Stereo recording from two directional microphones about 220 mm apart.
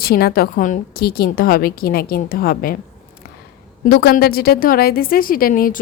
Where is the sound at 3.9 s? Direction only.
45° left (ahead or behind).